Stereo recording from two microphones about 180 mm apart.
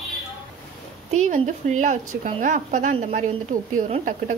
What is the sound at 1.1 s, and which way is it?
Speech, 45° right (ahead or behind).